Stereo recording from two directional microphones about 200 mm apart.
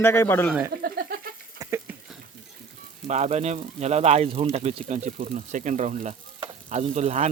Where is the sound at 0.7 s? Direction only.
50° right (ahead or behind).